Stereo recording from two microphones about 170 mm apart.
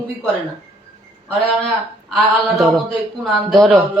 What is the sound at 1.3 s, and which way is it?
A man's voice, centre (ahead or behind).